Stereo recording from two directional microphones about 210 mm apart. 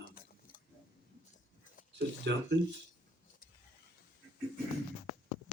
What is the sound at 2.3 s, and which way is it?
Speech, 55° right (ahead or behind).